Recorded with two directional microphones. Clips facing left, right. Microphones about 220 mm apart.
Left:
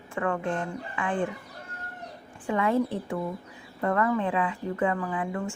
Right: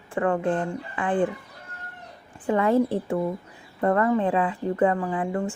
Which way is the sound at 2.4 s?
40° right (ahead or behind).